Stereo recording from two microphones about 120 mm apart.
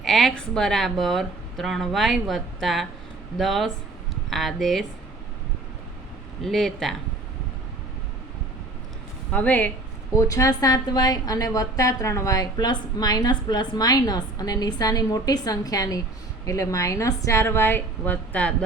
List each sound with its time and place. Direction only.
0.0 s speech: centre (ahead or behind)
6.4 s speech: 5° left (ahead or behind)
9.3 s speech: 15° left (ahead or behind)
10.2 s a woman's voice: 25° left (ahead or behind)